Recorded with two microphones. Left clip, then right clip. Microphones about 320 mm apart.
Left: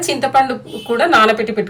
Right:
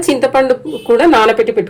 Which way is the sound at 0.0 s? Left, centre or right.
Centre.